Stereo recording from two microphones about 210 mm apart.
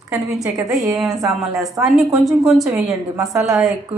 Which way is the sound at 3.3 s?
15° right (ahead or behind).